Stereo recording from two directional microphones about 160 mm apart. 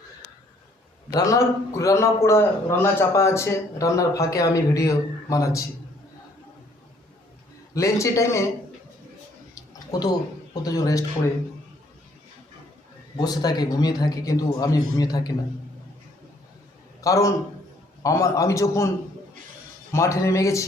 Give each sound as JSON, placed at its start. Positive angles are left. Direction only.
{"t": 1.1, "sound": "a man's voice", "side_deg": 20}
{"t": 7.7, "sound": "a man's voice", "side_deg": 20}
{"t": 9.6, "sound": "a sound", "side_deg": 20}
{"t": 13.1, "sound": "a man's voice", "side_deg": 25}
{"t": 17.0, "sound": "a man's voice", "side_deg": 20}
{"t": 19.9, "sound": "a man's voice", "side_deg": 20}